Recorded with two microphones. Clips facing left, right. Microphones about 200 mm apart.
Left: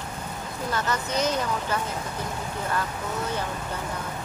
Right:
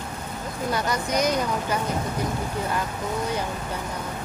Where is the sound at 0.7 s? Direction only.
15° right (ahead or behind).